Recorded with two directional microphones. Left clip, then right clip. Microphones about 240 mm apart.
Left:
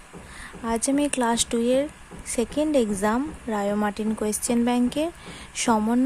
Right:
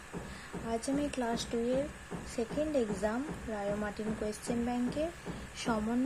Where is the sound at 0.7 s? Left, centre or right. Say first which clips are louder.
Left 11 dB; left.